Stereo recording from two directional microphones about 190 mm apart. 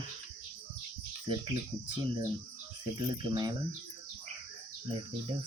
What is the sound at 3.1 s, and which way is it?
Cricket, 20° right (ahead or behind).